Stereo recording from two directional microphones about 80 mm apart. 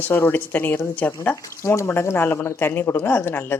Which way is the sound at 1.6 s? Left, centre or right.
Left.